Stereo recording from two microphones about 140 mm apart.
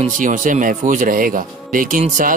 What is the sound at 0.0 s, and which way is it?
A man's voice, 65° right (ahead or behind).